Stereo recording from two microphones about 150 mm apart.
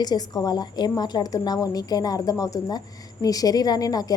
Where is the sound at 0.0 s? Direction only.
25° left (ahead or behind).